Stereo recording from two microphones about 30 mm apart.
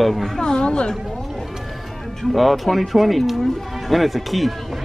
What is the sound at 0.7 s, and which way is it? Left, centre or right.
Speech, left.